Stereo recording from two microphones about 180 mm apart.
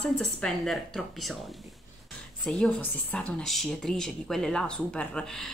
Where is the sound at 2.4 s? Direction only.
5° left (ahead or behind).